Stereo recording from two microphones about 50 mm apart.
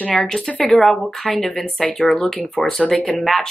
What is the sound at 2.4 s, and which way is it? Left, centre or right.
Speech, left.